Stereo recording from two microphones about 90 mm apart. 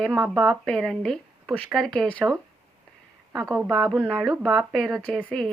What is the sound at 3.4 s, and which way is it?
Speech, 40° right (ahead or behind).